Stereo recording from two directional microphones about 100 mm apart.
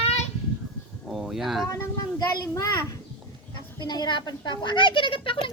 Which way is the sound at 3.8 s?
50° left (ahead or behind).